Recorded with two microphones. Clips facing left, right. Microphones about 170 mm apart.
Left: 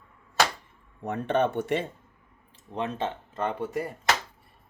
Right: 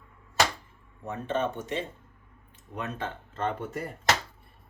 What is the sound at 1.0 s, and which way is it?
Speech, 65° left (ahead or behind).